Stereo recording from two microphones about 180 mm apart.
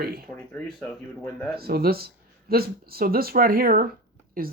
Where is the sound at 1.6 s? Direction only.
60° right (ahead or behind).